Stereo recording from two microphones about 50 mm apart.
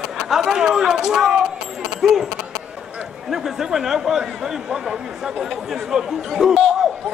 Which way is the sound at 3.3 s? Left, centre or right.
Centre.